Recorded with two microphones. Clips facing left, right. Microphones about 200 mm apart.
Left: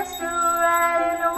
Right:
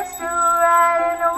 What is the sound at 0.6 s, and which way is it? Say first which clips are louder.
Music: right 5 dB; 30° left (ahead or behind).